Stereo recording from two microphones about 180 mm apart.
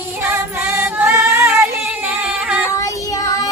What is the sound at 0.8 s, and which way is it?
Music, 10° right (ahead or behind).